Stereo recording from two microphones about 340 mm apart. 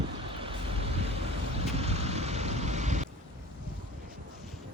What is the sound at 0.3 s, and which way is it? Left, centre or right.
Vehicle, centre.